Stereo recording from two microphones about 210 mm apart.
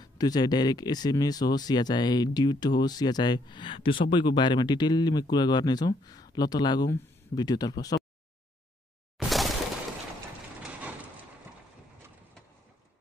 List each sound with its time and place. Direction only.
0.0 s speech: 20° left (ahead or behind)
9.3 s shatter: centre (ahead or behind)